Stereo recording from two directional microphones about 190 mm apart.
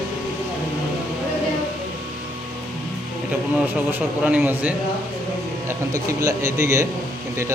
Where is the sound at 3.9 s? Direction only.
5° right (ahead or behind).